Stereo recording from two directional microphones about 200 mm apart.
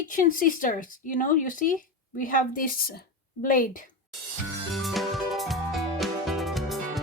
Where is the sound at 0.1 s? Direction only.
45° left (ahead or behind).